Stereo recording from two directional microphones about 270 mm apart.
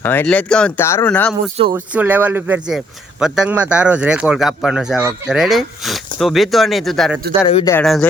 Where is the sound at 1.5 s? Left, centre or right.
Centre.